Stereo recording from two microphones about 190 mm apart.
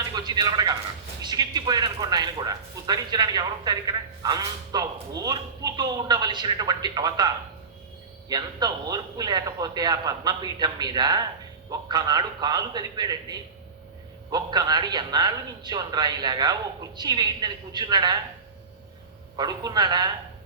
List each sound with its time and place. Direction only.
0.2 s a man's voice: 20° right (ahead or behind)
19.4 s speech: 20° right (ahead or behind)